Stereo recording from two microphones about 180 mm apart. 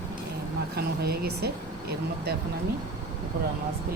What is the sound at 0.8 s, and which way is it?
Speech, 60° right (ahead or behind).